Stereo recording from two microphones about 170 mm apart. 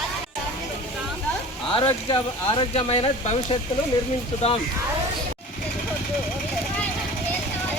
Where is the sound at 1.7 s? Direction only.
30° left (ahead or behind).